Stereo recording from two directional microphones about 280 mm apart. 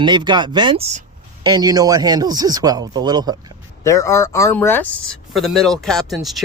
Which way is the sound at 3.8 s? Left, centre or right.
Centre.